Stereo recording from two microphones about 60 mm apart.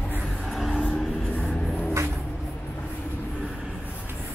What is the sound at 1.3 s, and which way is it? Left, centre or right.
Vehicle, centre.